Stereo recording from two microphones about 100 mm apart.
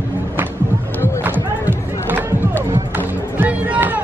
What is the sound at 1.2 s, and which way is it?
Music, 20° right (ahead or behind).